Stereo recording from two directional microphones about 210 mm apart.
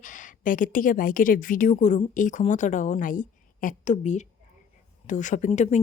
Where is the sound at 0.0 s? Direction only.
40° left (ahead or behind).